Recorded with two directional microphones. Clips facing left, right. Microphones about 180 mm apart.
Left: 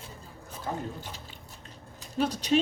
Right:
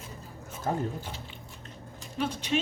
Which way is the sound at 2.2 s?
40° left (ahead or behind).